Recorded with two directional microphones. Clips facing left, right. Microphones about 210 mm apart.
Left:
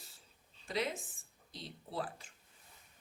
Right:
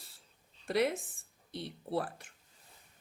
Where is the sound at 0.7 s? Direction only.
65° right (ahead or behind).